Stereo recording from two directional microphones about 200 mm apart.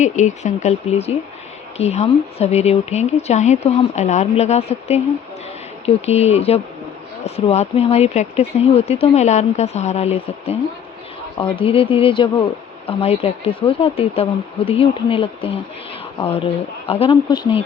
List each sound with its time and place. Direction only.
0.0 s speech: 35° left (ahead or behind)